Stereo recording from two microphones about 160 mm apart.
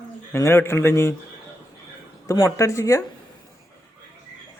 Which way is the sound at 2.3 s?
20° left (ahead or behind).